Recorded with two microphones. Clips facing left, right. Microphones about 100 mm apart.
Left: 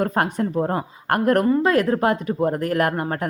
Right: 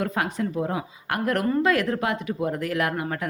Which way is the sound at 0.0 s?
45° left (ahead or behind).